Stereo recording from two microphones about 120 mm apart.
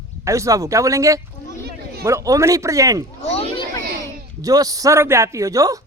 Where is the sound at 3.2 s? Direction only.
60° left (ahead or behind).